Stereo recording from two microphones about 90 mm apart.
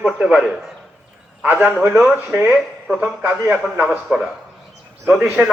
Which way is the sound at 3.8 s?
5° right (ahead or behind).